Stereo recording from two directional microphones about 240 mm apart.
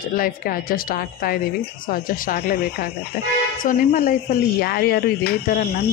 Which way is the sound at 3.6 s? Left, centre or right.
Left.